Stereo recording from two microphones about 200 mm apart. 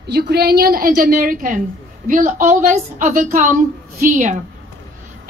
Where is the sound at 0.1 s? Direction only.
50° right (ahead or behind).